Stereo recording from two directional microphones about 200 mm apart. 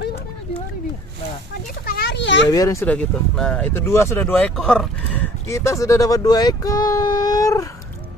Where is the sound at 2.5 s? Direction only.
15° left (ahead or behind).